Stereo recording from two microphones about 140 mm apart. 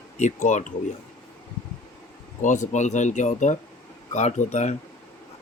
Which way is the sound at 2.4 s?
60° left (ahead or behind).